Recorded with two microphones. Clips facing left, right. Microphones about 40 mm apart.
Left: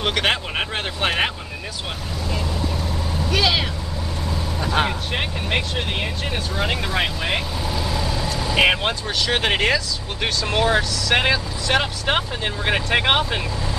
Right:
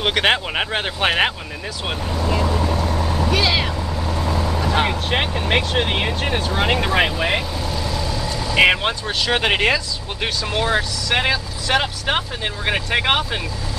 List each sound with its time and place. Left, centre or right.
0.0 s speech: centre
2.4 s vehicle: right
3.3 s vehicle: right
5.1 s speech: right
6.7 s speech: right
7.7 s vehicle: centre
8.5 s speech: centre
11.1 s speech: centre